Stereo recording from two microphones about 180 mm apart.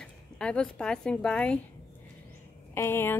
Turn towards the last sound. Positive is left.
turn(degrees=10)  # may be behind; listen again after turning